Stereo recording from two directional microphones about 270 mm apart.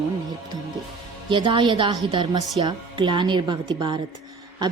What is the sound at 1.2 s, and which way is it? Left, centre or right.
Speech, centre.